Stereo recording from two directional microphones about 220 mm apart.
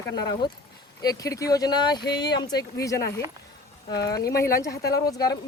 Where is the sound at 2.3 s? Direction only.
50° left (ahead or behind).